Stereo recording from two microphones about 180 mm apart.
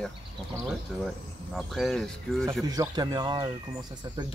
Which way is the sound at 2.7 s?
20° right (ahead or behind).